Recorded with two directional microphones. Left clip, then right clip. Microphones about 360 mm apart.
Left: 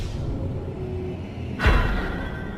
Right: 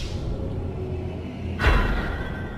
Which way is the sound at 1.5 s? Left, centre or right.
Centre.